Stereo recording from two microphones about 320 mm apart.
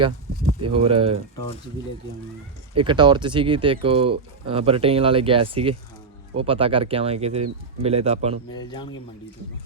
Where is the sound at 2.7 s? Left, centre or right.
Centre.